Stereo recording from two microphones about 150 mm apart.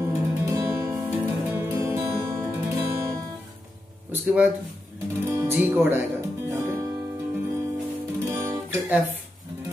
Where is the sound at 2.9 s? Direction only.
20° right (ahead or behind).